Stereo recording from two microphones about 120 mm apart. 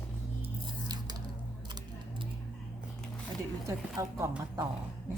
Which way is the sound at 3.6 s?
25° right (ahead or behind).